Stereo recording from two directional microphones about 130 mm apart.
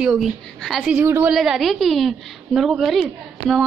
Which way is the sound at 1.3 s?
Centre (ahead or behind).